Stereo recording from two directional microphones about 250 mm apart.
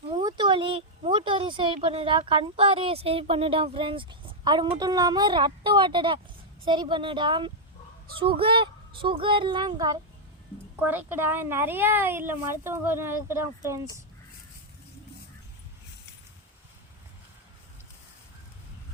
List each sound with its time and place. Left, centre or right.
0.2 s a woman's voice: centre